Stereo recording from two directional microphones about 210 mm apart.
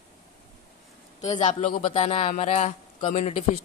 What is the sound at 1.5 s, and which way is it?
A woman's voice, 35° left (ahead or behind).